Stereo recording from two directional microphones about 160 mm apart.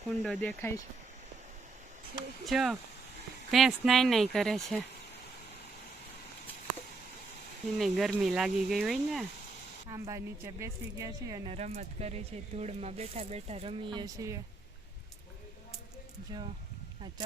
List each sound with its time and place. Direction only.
0.2 s speech: centre (ahead or behind)
0.6 s speech: 20° left (ahead or behind)
2.5 s speech: centre (ahead or behind)
7.8 s speech: centre (ahead or behind)
9.9 s a woman's voice: 20° right (ahead or behind)
11.4 s speech: 40° right (ahead or behind); by 14.4 s 20° right (ahead or behind)
16.3 s a woman's voice: 25° right (ahead or behind)